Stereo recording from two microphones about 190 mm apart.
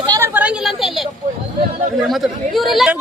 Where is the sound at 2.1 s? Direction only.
Centre (ahead or behind).